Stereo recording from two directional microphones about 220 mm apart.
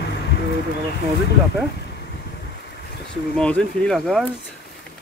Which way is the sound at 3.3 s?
5° left (ahead or behind).